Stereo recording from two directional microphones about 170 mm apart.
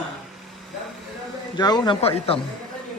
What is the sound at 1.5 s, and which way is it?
Speech, 25° left (ahead or behind).